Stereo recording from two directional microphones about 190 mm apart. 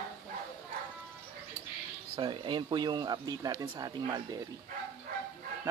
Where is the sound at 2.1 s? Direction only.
25° right (ahead or behind).